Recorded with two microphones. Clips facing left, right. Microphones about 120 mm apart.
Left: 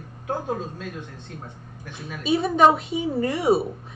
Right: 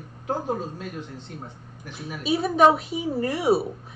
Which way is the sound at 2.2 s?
Centre (ahead or behind).